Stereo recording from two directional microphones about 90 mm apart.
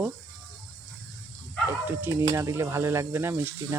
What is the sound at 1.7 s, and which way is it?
Speech, 25° right (ahead or behind).